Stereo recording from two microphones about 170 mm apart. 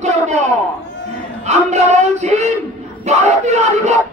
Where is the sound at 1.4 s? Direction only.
40° right (ahead or behind).